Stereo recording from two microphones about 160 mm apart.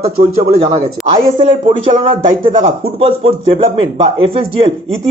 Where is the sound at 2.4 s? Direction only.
60° right (ahead or behind).